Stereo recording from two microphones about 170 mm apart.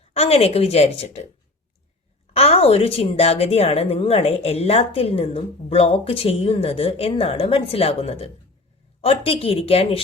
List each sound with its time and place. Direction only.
0.0 s a woman's voice: 35° left (ahead or behind)
2.3 s a woman's voice: 35° left (ahead or behind)